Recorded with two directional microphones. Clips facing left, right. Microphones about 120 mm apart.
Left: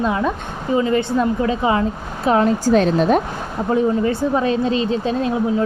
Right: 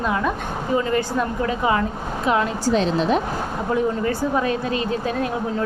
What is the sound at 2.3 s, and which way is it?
Speech, 40° left (ahead or behind).